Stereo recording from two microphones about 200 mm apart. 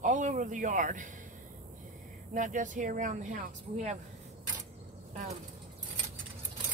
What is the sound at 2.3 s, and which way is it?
Speech, 40° right (ahead or behind).